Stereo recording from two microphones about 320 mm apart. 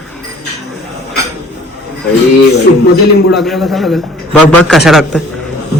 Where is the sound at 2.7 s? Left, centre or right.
Left.